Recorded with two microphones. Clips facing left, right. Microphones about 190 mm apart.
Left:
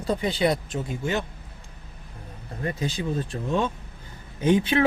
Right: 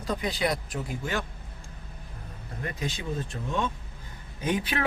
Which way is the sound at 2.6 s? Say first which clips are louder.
Left 5 dB; 30° left (ahead or behind).